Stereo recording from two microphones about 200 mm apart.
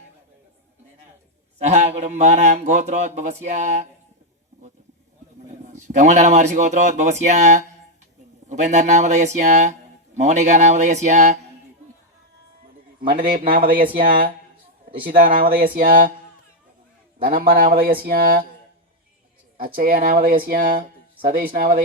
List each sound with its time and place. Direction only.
1.5 s speech: 35° right (ahead or behind)
5.5 s speech: 35° right (ahead or behind)
13.1 s speech: 45° right (ahead or behind)
17.2 s speech: 45° right (ahead or behind)
19.5 s speech: 45° right (ahead or behind)